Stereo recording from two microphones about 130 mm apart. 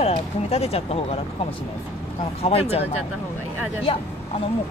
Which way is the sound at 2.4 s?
50° left (ahead or behind).